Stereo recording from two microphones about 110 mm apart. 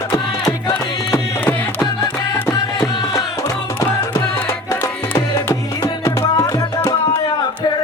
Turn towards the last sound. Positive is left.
turn(degrees=30)  # may be behind; listen again after turning